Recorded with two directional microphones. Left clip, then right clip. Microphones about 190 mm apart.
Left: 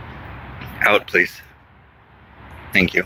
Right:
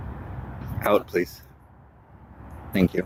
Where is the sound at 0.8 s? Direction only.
15° right (ahead or behind).